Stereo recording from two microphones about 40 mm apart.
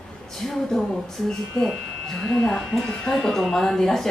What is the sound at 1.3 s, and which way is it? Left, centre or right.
Speech, left.